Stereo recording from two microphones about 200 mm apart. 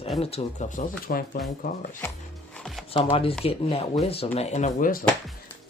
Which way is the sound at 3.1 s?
25° left (ahead or behind).